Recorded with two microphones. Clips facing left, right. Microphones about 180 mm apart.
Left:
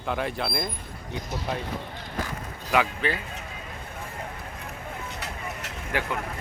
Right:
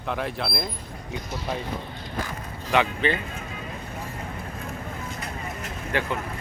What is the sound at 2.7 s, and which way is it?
Speech, 5° left (ahead or behind).